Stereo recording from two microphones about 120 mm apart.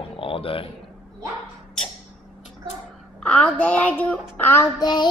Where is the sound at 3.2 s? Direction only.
5° left (ahead or behind).